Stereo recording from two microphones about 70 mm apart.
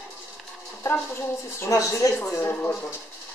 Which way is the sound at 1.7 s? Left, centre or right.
Left.